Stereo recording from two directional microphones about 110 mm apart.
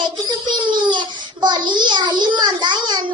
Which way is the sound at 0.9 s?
45° right (ahead or behind).